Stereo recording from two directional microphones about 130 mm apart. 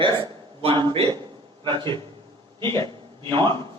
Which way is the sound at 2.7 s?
25° left (ahead or behind).